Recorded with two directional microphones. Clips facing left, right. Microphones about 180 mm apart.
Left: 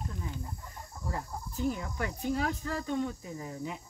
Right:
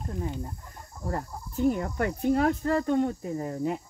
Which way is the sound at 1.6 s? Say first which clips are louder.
Right 8 dB; 55° right (ahead or behind).